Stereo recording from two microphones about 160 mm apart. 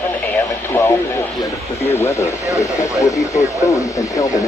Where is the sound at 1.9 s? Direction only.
15° left (ahead or behind).